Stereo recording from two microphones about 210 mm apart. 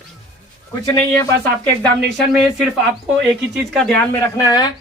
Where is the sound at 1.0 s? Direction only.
10° left (ahead or behind).